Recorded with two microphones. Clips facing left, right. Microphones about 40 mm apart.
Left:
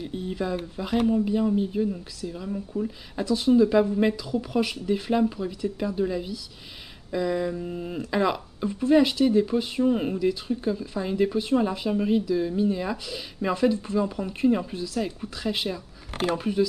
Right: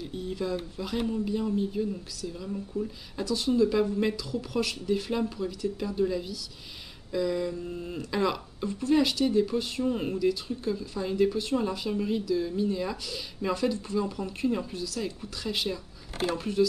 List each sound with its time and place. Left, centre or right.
0.0 s speech: centre
16.1 s speech: left
16.3 s speech: centre